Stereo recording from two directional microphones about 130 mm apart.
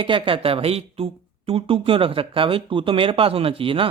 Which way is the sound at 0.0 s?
40° right (ahead or behind).